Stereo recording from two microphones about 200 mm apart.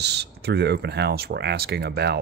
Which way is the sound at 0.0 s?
55° right (ahead or behind).